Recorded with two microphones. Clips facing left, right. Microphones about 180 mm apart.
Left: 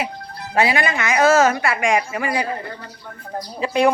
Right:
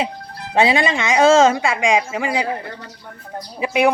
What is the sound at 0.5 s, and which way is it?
Speech, 25° right (ahead or behind).